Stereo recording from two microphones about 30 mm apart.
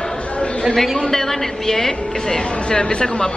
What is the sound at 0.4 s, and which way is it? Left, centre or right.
Chatter, left.